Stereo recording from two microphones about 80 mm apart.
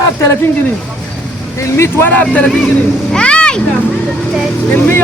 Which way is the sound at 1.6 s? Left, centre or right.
Left.